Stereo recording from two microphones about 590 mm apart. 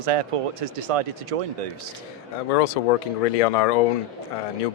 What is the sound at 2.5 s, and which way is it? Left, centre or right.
Speech, left.